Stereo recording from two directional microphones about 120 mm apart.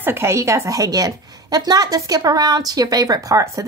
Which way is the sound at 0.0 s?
20° right (ahead or behind).